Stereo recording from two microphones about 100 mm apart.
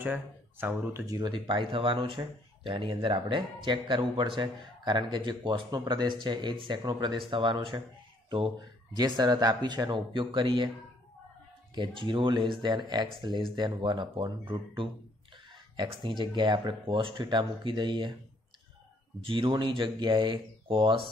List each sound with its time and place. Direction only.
0.0 s speech: 20° right (ahead or behind)
1.0 s speech: 40° right (ahead or behind)
1.3 s speech: 55° right (ahead or behind)
8.5 s speech: 45° right (ahead or behind)
11.7 s speech: 50° right (ahead or behind)
15.7 s speech: 50° right (ahead or behind)
19.2 s speech: 60° right (ahead or behind)